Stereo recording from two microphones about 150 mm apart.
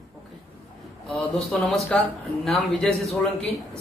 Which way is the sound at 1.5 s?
5° left (ahead or behind).